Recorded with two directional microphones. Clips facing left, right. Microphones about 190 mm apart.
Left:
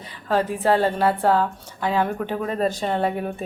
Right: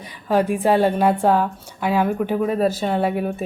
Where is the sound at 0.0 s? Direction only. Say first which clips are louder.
Right 3 dB; 15° right (ahead or behind).